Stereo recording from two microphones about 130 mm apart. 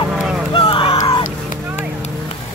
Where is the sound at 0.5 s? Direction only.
40° left (ahead or behind).